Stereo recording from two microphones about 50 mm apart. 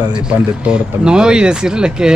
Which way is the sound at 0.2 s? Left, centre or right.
Centre.